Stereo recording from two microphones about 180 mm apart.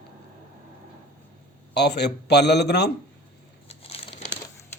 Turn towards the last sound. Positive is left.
turn(degrees=35)  # may be behind; listen again after turning